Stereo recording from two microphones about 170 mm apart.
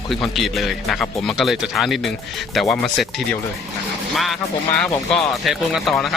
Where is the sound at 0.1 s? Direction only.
Centre (ahead or behind).